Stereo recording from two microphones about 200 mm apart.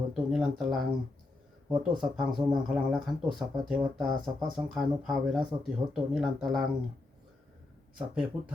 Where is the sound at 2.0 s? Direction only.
Centre (ahead or behind).